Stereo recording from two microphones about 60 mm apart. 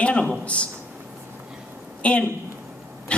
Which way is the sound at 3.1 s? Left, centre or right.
Centre.